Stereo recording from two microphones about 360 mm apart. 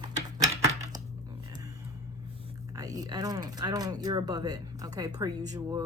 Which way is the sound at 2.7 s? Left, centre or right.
Centre.